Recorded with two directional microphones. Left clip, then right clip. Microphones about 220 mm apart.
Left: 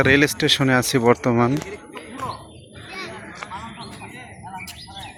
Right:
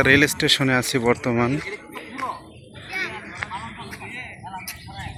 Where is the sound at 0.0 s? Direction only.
5° left (ahead or behind).